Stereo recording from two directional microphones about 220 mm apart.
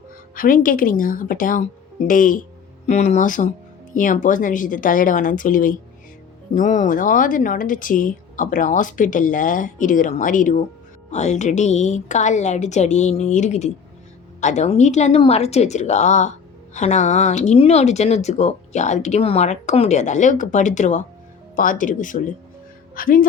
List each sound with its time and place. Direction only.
0.3 s speech: 40° left (ahead or behind)